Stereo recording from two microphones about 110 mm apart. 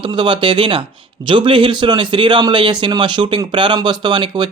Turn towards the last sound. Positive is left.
turn(degrees=-45)  # may be behind; listen again after turning